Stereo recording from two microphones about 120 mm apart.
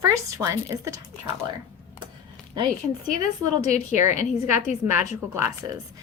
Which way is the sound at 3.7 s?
75° left (ahead or behind).